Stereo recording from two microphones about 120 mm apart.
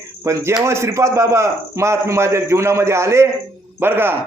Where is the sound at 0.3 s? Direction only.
20° right (ahead or behind).